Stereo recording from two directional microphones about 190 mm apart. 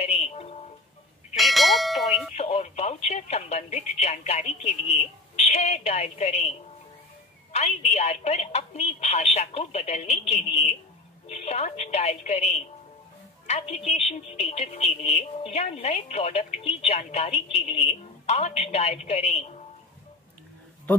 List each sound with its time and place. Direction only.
0.0 s music: 35° left (ahead or behind)
1.3 s bell: centre (ahead or behind)
2.3 s speech: 35° left (ahead or behind)
7.5 s a woman's voice: 35° left (ahead or behind)